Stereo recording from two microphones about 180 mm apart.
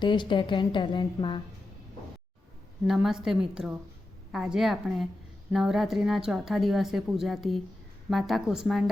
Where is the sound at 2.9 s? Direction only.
Centre (ahead or behind).